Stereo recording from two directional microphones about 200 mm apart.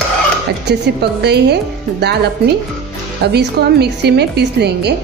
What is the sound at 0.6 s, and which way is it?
Speech, 55° right (ahead or behind).